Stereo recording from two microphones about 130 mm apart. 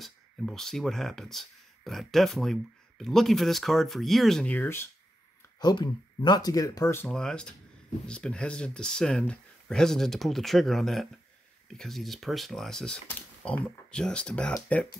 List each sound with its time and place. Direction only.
0.0 s speech: centre (ahead or behind)
4.6 s speech: 20° left (ahead or behind)
5.6 s speech: 35° left (ahead or behind)
7.1 s speech: 5° left (ahead or behind)